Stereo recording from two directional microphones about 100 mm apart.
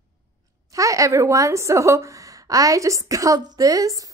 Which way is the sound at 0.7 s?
35° right (ahead or behind).